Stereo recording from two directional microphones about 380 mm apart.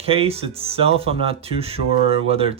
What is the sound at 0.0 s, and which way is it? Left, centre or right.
Speech, centre.